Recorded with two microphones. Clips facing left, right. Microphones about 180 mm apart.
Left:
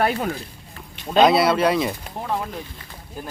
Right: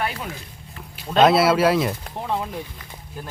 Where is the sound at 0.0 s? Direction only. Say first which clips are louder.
Left 6 dB; 50° left (ahead or behind).